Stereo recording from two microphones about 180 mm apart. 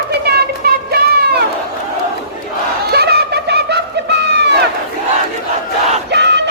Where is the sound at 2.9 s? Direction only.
65° right (ahead or behind).